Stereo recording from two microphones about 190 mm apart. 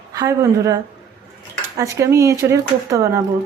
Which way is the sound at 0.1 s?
15° right (ahead or behind).